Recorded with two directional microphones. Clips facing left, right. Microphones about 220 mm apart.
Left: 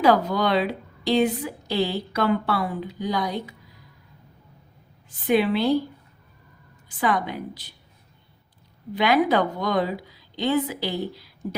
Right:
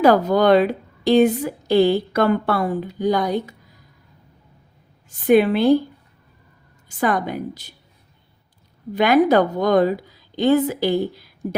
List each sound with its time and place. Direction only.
0.0 s a woman's voice: 45° right (ahead or behind)
5.2 s a woman's voice: 50° right (ahead or behind)
6.8 s a woman's voice: 45° right (ahead or behind)
9.0 s a woman's voice: 45° right (ahead or behind)